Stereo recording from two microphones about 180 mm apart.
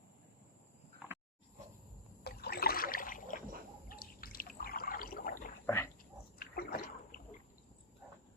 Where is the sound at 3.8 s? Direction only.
55° left (ahead or behind).